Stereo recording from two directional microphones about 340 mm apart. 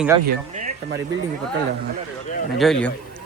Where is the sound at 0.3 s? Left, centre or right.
Right.